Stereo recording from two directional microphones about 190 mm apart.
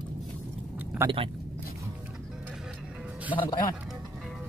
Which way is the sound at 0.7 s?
15° right (ahead or behind).